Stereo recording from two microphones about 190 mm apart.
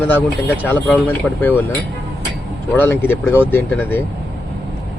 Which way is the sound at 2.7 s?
10° left (ahead or behind).